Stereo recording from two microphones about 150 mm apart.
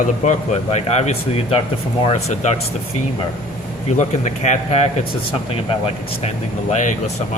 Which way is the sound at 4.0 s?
50° left (ahead or behind).